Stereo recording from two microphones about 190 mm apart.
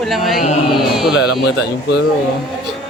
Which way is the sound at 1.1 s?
60° left (ahead or behind).